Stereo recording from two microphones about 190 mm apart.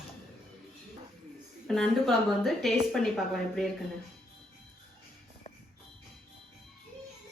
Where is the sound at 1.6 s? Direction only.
Centre (ahead or behind).